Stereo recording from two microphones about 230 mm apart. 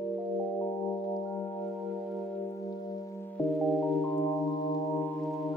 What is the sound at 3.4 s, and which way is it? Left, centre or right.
Music, centre.